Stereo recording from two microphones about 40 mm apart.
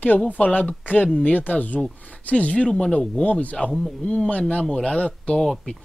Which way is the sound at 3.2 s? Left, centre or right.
Left.